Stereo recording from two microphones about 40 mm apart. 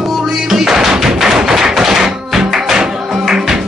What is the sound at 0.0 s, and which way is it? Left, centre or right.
Music, centre.